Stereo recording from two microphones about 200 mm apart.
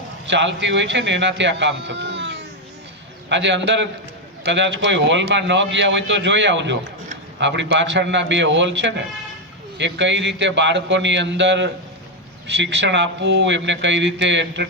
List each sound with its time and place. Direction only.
0.3 s a man's voice: 65° right (ahead or behind)